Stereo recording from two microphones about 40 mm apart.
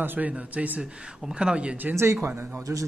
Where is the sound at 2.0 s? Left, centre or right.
Right.